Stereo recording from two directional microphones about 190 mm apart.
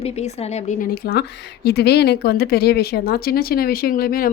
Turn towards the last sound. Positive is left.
turn(degrees=50)  # may be behind; listen again after turning